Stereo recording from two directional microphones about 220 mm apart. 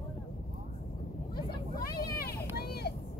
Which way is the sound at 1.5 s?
45° left (ahead or behind).